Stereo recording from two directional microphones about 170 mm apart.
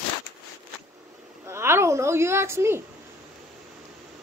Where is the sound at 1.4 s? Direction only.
15° right (ahead or behind).